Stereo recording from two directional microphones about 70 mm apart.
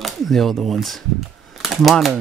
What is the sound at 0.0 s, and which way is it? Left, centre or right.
Speech, centre.